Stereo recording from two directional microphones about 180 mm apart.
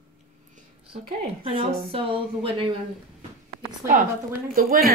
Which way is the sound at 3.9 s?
50° right (ahead or behind).